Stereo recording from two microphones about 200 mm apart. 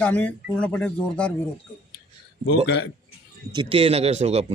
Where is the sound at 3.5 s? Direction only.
25° right (ahead or behind).